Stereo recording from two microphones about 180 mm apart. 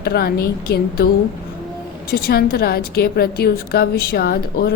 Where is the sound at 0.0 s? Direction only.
60° left (ahead or behind).